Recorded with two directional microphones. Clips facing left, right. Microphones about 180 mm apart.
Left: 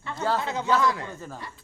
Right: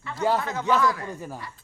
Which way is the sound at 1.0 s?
10° right (ahead or behind).